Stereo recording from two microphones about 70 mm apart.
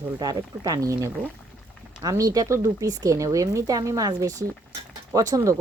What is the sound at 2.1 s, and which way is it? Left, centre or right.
A woman's voice, right.